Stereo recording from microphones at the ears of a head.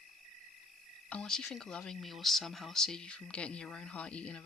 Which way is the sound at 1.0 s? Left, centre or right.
Left.